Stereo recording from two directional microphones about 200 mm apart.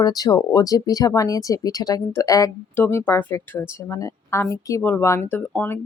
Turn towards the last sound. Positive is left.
turn(degrees=10)  # may be behind; listen again after turning